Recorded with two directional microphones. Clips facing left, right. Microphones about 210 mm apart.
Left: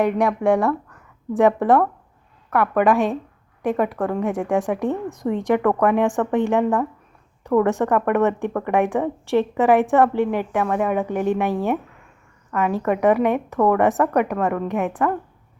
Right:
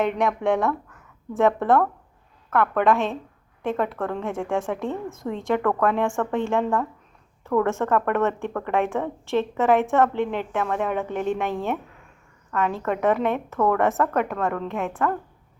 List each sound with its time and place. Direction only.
0.0 s speech: 10° left (ahead or behind)